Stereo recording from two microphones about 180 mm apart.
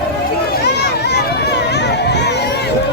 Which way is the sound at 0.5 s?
65° left (ahead or behind).